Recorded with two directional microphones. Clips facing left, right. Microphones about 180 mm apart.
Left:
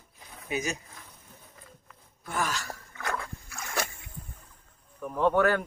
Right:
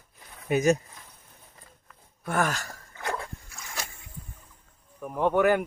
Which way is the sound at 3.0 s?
20° right (ahead or behind).